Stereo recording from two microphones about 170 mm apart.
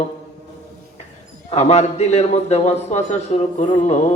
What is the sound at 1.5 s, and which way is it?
A man's voice, 40° left (ahead or behind).